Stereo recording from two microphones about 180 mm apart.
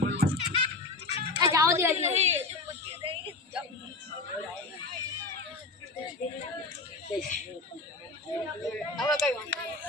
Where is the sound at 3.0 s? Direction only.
30° right (ahead or behind).